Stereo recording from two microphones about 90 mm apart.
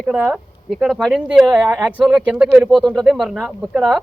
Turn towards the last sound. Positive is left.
turn(degrees=0)  # may be behind; listen again after turning